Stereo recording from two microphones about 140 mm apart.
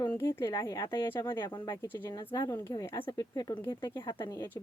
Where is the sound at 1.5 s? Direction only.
30° left (ahead or behind).